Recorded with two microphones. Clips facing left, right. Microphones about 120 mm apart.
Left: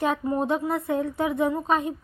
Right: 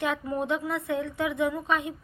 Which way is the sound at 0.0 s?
35° left (ahead or behind).